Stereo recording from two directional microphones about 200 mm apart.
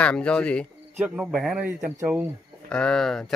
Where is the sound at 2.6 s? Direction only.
5° left (ahead or behind).